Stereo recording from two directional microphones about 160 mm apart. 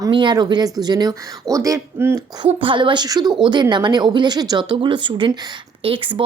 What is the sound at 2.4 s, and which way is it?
Speech, 30° right (ahead or behind).